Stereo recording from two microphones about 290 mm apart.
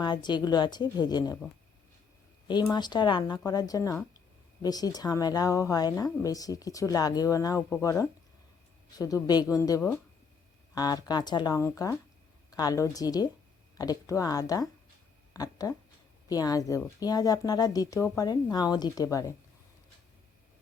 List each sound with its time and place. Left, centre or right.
0.0 s a woman's voice: centre
2.5 s a woman's voice: centre